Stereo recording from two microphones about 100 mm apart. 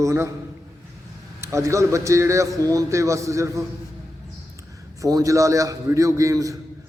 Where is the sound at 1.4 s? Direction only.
30° right (ahead or behind).